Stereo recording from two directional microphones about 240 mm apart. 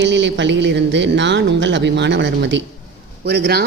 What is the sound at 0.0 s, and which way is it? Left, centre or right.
Speech, right.